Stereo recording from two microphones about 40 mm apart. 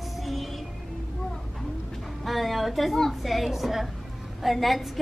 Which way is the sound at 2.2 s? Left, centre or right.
Centre.